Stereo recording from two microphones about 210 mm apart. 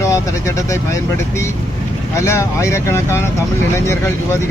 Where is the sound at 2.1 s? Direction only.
15° left (ahead or behind).